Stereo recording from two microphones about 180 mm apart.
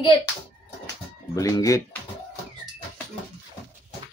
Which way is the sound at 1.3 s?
20° left (ahead or behind).